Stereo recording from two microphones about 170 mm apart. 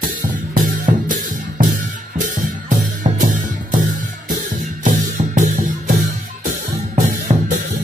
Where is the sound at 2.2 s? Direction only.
50° right (ahead or behind).